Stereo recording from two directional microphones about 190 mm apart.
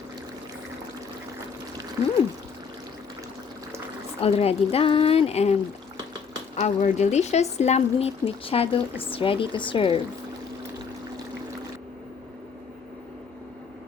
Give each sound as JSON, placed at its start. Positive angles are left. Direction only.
{"t": 4.2, "sound": "speech", "side_deg": 30}
{"t": 6.6, "sound": "speech", "side_deg": 40}